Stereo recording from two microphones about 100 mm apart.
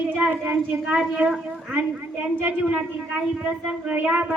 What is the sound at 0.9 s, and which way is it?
A woman's voice, 5° right (ahead or behind).